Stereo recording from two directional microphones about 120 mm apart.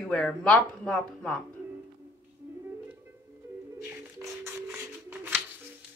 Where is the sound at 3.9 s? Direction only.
20° right (ahead or behind).